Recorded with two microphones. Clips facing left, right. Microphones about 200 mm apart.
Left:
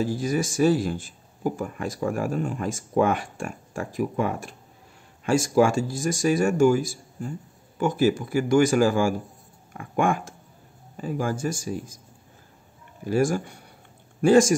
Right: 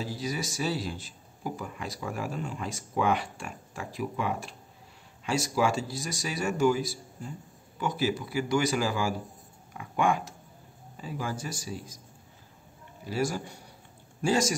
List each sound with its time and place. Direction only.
0.0 s speech: 50° left (ahead or behind)
13.0 s speech: 50° left (ahead or behind)